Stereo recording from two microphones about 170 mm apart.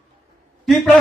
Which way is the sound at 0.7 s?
Centre (ahead or behind).